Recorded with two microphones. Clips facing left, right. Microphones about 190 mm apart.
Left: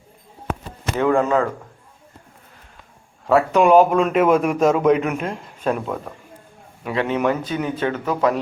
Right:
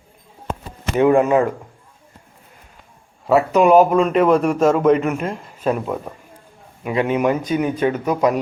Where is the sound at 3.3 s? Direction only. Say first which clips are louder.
Right 1 dB; 10° right (ahead or behind).